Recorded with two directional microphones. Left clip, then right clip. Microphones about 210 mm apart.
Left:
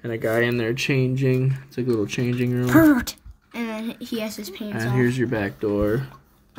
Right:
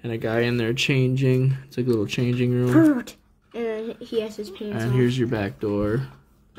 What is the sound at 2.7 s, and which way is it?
Speech, 50° left (ahead or behind).